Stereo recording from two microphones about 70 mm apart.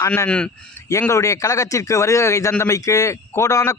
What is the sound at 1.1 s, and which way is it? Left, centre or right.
A man's voice, left.